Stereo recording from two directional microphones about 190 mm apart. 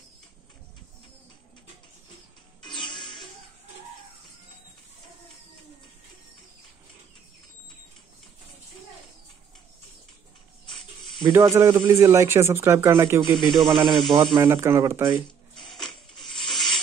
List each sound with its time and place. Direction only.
2.6 s music: 25° left (ahead or behind)
10.7 s snake: centre (ahead or behind)
11.2 s speech: 15° right (ahead or behind)
13.5 s speech: centre (ahead or behind)
14.1 s speech: 25° right (ahead or behind)
14.4 s speech: 15° right (ahead or behind)
15.5 s filing: 5° left (ahead or behind)